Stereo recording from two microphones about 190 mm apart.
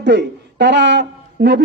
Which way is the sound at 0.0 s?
65° right (ahead or behind).